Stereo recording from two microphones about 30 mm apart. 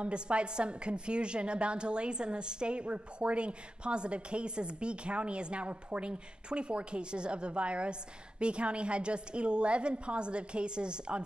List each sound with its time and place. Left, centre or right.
0.0 s a woman's voice: right